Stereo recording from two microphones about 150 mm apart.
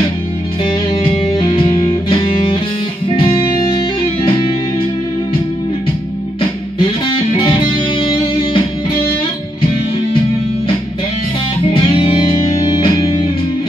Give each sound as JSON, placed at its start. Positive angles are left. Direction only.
{"t": 0.7, "sound": "music", "side_deg": 35}
{"t": 6.8, "sound": "music", "side_deg": 35}
{"t": 11.6, "sound": "music", "side_deg": 35}